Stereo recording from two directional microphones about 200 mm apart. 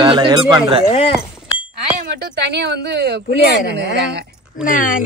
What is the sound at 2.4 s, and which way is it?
A woman's voice, 60° right (ahead or behind).